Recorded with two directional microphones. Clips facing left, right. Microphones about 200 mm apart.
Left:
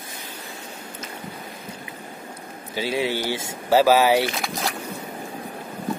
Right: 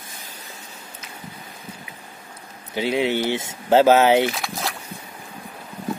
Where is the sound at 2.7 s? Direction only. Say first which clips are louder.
Right 3 dB; 20° right (ahead or behind).